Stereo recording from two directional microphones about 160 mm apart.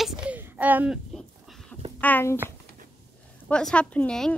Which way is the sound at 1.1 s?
Centre (ahead or behind).